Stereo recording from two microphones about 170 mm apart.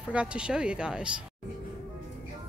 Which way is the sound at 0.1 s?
5° right (ahead or behind).